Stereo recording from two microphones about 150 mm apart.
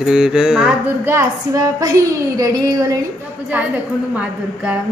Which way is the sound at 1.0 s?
20° right (ahead or behind).